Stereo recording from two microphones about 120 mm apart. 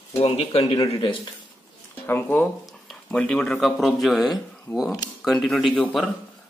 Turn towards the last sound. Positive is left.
turn(degrees=5)  # may be behind; listen again after turning